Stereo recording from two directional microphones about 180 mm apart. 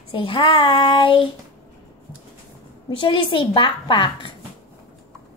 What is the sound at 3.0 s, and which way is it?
A woman's voice, 25° left (ahead or behind).